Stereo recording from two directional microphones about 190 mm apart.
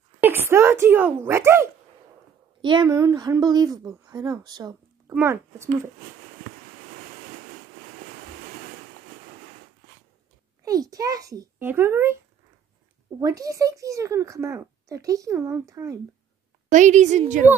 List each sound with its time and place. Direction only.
0.2 s speech: 10° right (ahead or behind)
2.6 s speech: 25° right (ahead or behind)
10.6 s speech: 20° right (ahead or behind)
13.2 s speech: 20° right (ahead or behind)
16.6 s a woman's voice: 40° right (ahead or behind)